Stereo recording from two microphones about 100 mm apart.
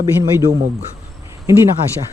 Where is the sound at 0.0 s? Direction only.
35° right (ahead or behind).